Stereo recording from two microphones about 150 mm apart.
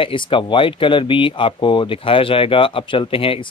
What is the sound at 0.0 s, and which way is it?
Speech, 35° left (ahead or behind).